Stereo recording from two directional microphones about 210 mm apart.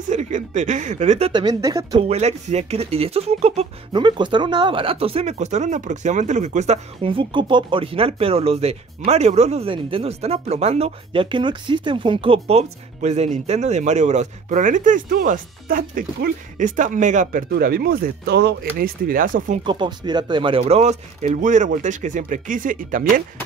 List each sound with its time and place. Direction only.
0.1 s speech: 35° right (ahead or behind)
1.3 s speech: 15° right (ahead or behind)
2.0 s speech: 30° right (ahead or behind)
19.6 s speech: 20° right (ahead or behind); by 23.2 s 40° right (ahead or behind)